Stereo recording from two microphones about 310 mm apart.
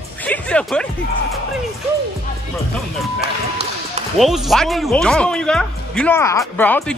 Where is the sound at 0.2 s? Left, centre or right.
Centre.